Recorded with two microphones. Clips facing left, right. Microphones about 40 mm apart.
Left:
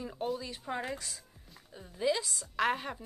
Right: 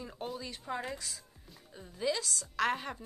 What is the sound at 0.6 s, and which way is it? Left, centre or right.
A woman's voice, centre.